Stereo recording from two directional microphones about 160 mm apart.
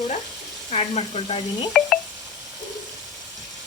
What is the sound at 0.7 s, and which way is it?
Speech, 40° left (ahead or behind).